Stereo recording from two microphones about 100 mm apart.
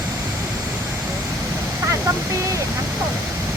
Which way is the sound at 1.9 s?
30° right (ahead or behind).